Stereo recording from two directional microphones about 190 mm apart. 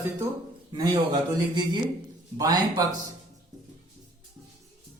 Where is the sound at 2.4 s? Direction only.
20° right (ahead or behind).